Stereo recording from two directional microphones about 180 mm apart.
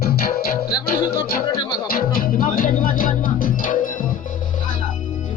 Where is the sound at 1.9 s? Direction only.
50° left (ahead or behind).